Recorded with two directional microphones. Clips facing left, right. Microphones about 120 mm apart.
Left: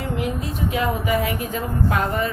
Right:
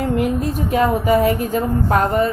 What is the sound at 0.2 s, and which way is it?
A woman's voice, 45° right (ahead or behind).